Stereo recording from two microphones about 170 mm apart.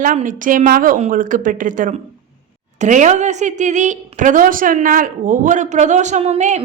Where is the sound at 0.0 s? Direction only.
50° right (ahead or behind).